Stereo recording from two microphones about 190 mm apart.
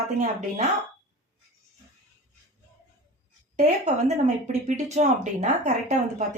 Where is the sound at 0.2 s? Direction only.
40° right (ahead or behind).